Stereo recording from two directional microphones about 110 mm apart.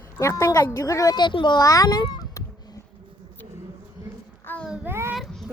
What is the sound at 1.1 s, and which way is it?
Speech, 45° left (ahead or behind).